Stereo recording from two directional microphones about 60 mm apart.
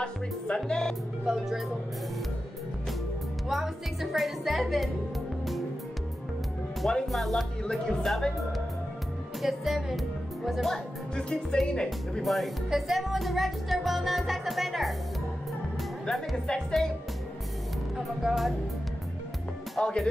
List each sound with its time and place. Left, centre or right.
0.0 s music: centre
1.2 s speech: centre
3.4 s music: centre
7.1 s music: centre
9.4 s speech: centre
11.1 s music: centre
12.2 s music: centre
16.1 s music: centre
17.9 s music: centre
19.8 s music: centre